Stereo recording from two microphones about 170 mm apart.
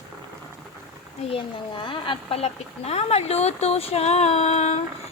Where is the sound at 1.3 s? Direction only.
30° left (ahead or behind).